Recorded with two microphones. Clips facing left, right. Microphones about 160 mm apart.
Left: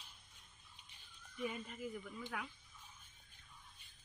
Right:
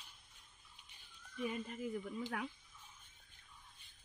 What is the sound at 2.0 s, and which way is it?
Speech, 35° right (ahead or behind).